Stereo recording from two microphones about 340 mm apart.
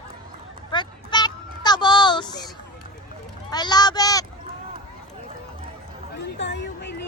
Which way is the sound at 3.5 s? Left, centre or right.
Centre.